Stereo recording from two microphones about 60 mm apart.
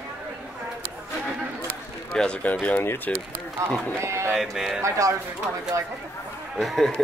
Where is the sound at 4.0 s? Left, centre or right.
Right.